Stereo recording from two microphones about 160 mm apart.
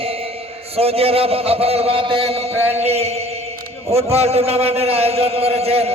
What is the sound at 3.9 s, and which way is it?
Speech, 40° right (ahead or behind).